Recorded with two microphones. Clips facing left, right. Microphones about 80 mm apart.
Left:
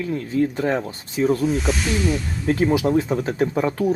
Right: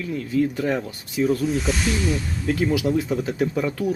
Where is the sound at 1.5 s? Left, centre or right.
Centre.